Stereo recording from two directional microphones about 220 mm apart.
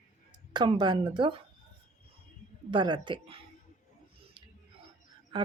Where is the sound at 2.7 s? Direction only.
20° right (ahead or behind).